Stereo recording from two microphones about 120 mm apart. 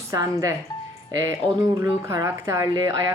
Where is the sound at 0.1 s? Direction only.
30° right (ahead or behind).